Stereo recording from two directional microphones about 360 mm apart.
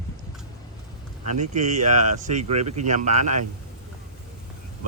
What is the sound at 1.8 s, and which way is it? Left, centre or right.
Speech, centre.